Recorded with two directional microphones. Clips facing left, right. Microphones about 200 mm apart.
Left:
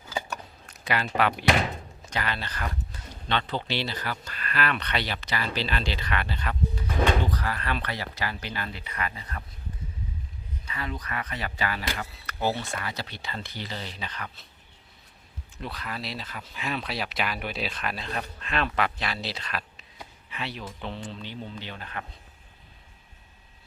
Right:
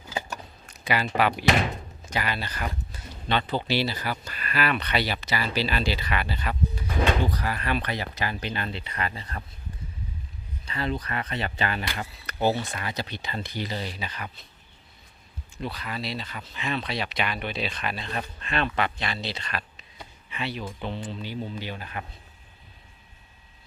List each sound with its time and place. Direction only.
0.7 s speech: centre (ahead or behind); by 9.4 s 30° right (ahead or behind)
10.7 s speech: 30° right (ahead or behind); by 14.3 s 10° right (ahead or behind)
15.5 s speech: centre (ahead or behind)